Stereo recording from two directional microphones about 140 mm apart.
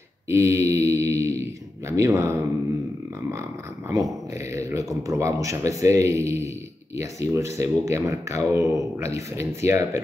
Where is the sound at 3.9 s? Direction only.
20° right (ahead or behind).